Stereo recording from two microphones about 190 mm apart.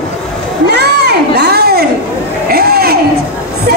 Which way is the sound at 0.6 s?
60° right (ahead or behind).